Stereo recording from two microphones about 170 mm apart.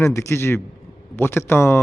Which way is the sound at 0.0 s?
15° left (ahead or behind).